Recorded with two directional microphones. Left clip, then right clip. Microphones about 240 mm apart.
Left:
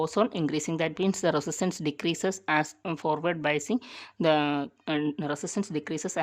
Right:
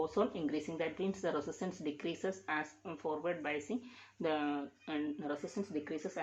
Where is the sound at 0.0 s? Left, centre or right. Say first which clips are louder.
Left 8 dB; left.